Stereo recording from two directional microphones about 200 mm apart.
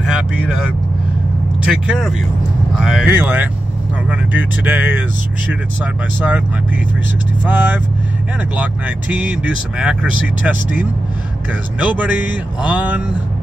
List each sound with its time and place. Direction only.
0.0 s vehicle: 5° right (ahead or behind)
1.6 s speech: 5° right (ahead or behind)
7.4 s speech: 10° right (ahead or behind)